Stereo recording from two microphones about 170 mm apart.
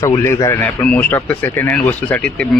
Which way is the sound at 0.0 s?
15° left (ahead or behind).